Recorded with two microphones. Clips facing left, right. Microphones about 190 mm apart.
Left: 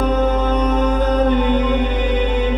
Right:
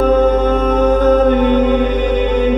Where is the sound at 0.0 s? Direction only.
50° right (ahead or behind).